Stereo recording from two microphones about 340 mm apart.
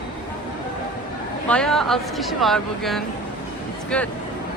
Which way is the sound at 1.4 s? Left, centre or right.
Centre.